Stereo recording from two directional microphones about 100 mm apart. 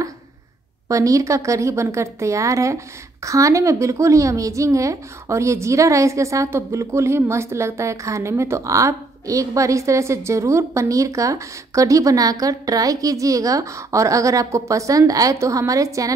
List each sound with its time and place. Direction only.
0.8 s a woman's voice: 30° right (ahead or behind)